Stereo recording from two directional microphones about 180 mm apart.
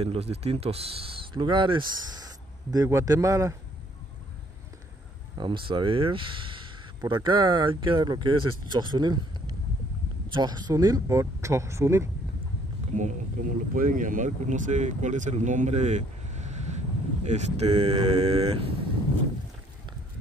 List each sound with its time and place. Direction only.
0.0 s speech: 35° right (ahead or behind); by 3.5 s 15° right (ahead or behind)
5.4 s speech: 25° right (ahead or behind)
10.3 s speech: 25° right (ahead or behind)
12.9 s speech: 45° right (ahead or behind)